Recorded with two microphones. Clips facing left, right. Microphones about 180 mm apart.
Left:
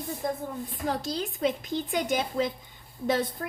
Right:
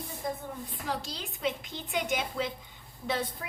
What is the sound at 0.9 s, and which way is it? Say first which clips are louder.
A woman's voice: left 6 dB; 45° left (ahead or behind).